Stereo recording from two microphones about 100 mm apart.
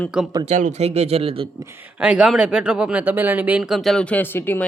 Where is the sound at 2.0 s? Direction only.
10° right (ahead or behind).